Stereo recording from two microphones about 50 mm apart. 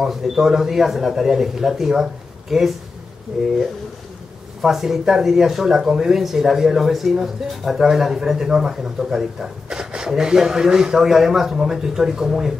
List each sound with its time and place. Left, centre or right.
0.0 s speech: centre
4.6 s speech: centre